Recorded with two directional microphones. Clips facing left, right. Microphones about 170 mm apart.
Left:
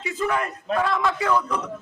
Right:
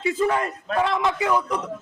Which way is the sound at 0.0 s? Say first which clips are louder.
Right 3 dB; 30° right (ahead or behind).